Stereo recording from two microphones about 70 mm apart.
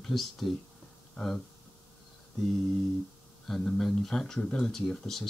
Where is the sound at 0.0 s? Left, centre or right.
Centre.